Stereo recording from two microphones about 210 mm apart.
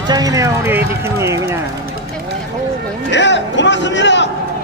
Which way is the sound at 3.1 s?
55° left (ahead or behind).